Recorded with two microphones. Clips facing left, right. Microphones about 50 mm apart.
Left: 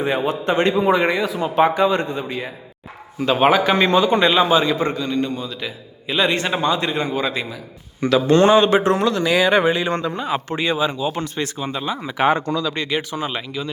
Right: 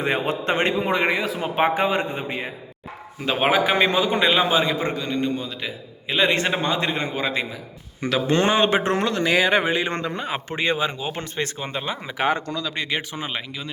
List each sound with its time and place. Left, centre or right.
0.0 s a man's voice: right
0.8 s a man's voice: centre
1.4 s a man's voice: right
9.5 s speech: centre
12.3 s speech: left
12.9 s speech: right